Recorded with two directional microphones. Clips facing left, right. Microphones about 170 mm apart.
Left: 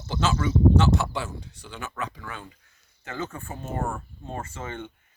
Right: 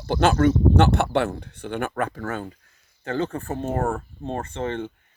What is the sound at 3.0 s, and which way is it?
Speech, 30° right (ahead or behind).